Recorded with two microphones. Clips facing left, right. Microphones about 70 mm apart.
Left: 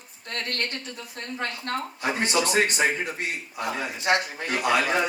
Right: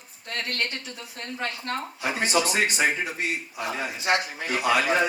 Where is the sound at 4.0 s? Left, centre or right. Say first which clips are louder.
Left 1 dB; left.